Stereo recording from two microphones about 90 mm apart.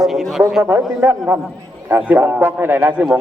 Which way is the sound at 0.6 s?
25° right (ahead or behind).